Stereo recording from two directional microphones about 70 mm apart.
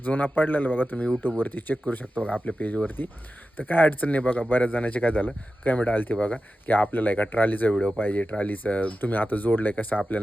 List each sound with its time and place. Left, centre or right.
0.0 s speech: left
7.7 s speech: centre
7.9 s speech: left